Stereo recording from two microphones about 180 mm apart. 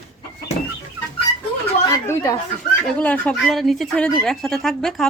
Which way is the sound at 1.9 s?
15° left (ahead or behind).